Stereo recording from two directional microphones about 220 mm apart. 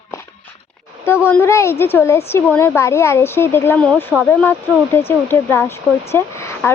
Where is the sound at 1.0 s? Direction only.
10° left (ahead or behind).